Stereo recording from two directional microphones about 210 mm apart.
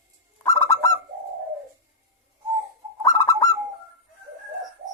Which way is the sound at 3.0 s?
15° left (ahead or behind).